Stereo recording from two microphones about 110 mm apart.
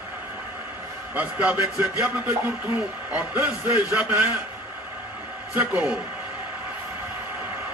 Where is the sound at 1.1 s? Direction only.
15° right (ahead or behind).